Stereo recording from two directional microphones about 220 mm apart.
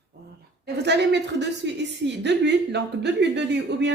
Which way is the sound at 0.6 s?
50° right (ahead or behind).